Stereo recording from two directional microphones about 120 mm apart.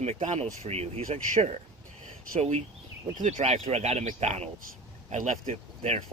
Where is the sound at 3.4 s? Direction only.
60° right (ahead or behind).